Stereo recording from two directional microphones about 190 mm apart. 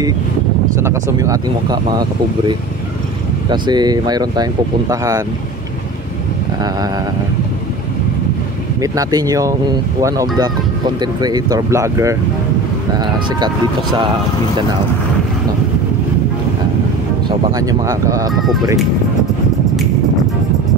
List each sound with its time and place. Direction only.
0.7 s speech: 15° right (ahead or behind)
8.8 s speech: 20° right (ahead or behind)
17.6 s speech: 20° right (ahead or behind)
18.3 s speech: centre (ahead or behind)